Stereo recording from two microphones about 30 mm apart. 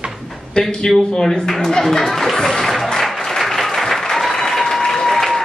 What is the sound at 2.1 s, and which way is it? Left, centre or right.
Speech, centre.